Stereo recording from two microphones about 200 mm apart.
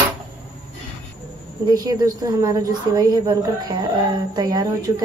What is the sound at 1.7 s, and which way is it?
Speech, 20° right (ahead or behind).